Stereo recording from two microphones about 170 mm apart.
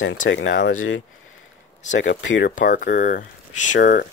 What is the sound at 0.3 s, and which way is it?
Speech, 90° left.